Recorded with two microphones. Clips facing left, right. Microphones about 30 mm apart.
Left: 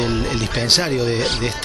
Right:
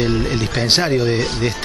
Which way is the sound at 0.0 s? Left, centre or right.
Centre.